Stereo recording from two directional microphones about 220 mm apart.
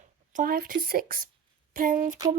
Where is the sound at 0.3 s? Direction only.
40° right (ahead or behind).